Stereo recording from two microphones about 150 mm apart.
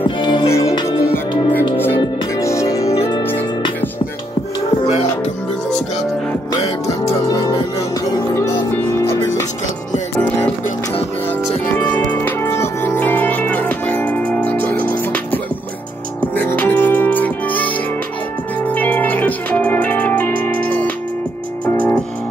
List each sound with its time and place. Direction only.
0.2 s music: 30° left (ahead or behind)
0.5 s music: 20° left (ahead or behind)
4.8 s music: 45° left (ahead or behind)
6.9 s music: 20° left (ahead or behind)
8.7 s music: 15° left (ahead or behind)
11.7 s music: 15° left (ahead or behind)